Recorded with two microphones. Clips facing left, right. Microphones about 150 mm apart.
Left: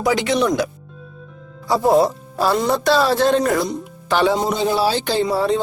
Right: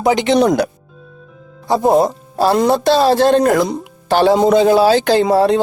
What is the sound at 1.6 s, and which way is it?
Speech, 20° right (ahead or behind).